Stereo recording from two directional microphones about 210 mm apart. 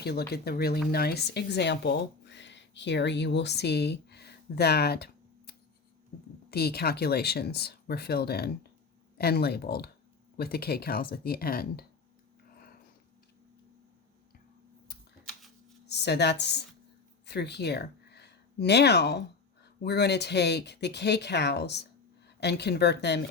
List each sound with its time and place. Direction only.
0.0 s speech: 50° left (ahead or behind)
15.2 s a sound: centre (ahead or behind)
15.9 s speech: 50° left (ahead or behind)